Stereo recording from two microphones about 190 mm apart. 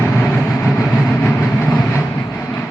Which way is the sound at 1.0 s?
15° left (ahead or behind).